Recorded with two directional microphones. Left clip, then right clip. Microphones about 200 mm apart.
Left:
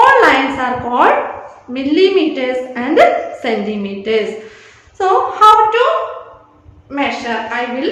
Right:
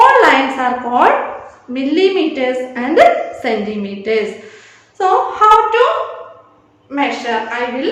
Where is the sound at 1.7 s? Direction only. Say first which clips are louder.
Left 2 dB; 5° left (ahead or behind).